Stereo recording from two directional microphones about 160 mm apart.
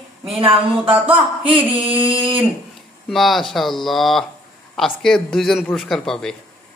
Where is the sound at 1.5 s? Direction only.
35° right (ahead or behind).